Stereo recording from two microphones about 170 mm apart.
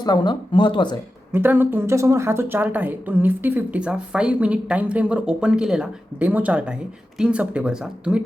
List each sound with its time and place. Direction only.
0.0 s speech: 25° left (ahead or behind)
1.3 s speech: 10° right (ahead or behind)